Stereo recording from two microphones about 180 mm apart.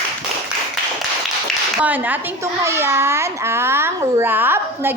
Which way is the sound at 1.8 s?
10° right (ahead or behind).